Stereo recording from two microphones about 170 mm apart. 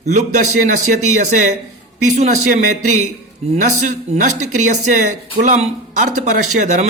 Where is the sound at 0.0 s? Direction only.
45° right (ahead or behind).